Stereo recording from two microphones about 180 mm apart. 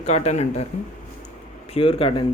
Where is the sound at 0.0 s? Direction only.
35° left (ahead or behind).